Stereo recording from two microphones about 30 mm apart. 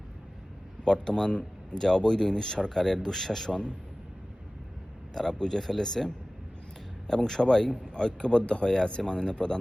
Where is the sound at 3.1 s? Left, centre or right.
Centre.